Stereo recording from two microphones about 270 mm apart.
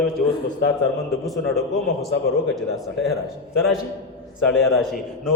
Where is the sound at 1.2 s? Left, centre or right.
Centre.